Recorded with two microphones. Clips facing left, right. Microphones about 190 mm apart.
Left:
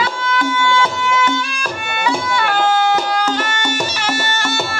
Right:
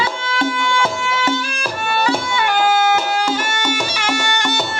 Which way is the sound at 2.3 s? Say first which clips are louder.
Even; 10° right (ahead or behind).